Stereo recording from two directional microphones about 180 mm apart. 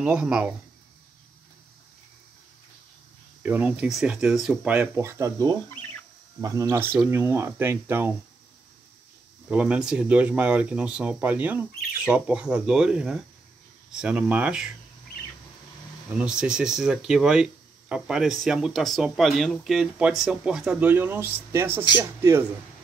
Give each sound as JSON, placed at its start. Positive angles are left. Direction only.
{"t": 0.0, "sound": "speech", "side_deg": -5}
{"t": 3.4, "sound": "speech", "side_deg": -10}
{"t": 9.5, "sound": "speech", "side_deg": -5}
{"t": 16.1, "sound": "speech", "side_deg": -5}